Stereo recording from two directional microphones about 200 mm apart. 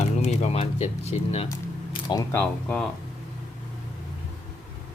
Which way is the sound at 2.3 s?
10° left (ahead or behind).